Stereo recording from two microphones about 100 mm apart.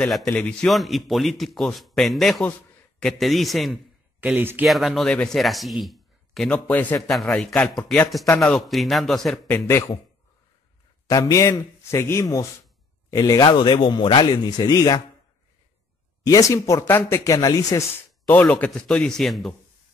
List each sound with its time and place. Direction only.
0.3 s a man's voice: 10° left (ahead or behind)
0.7 s speech: centre (ahead or behind)
4.2 s speech: 15° right (ahead or behind)
4.6 s speech: centre (ahead or behind)
5.1 s a man's voice: 10° left (ahead or behind)
5.4 s speech: centre (ahead or behind)
6.7 s a man's voice: 20° left (ahead or behind)
7.0 s a man's voice: centre (ahead or behind)
9.5 s speech: 25° left (ahead or behind)
11.1 s a man's voice: 35° left (ahead or behind)
13.5 s speech: 50° left (ahead or behind)
16.3 s a man's voice: 35° left (ahead or behind)
18.2 s a man's voice: 15° left (ahead or behind)